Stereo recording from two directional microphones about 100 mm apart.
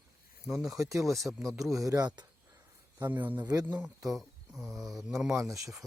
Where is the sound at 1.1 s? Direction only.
Centre (ahead or behind).